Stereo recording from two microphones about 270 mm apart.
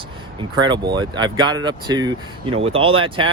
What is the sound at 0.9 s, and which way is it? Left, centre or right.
Speech, centre.